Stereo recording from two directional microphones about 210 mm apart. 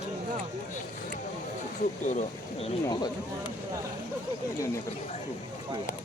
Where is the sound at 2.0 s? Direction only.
35° left (ahead or behind).